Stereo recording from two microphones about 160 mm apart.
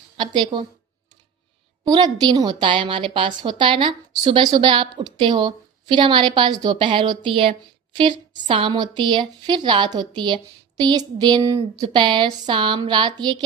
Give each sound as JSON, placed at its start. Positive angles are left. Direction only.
{"t": 0.2, "sound": "a woman's voice", "side_deg": -30}
{"t": 1.8, "sound": "a woman's voice", "side_deg": -25}